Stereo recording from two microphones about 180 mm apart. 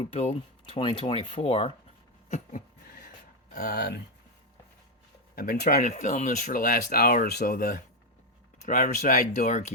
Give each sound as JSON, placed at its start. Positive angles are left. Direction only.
{"t": 0.0, "sound": "speech", "side_deg": 35}
{"t": 3.5, "sound": "speech", "side_deg": 60}
{"t": 5.3, "sound": "speech", "side_deg": 55}